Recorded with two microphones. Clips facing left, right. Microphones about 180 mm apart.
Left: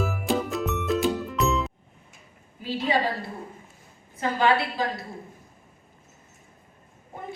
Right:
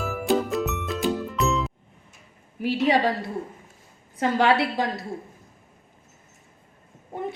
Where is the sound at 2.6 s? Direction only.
75° right (ahead or behind).